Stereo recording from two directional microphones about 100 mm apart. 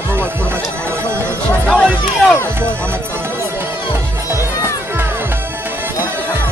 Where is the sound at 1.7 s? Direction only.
5° left (ahead or behind).